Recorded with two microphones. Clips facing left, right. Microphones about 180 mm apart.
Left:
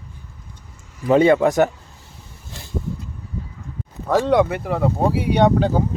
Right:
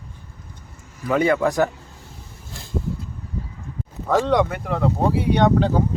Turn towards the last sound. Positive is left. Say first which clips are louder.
# left 1 dB
turn(degrees=10)  # may be behind; listen again after turning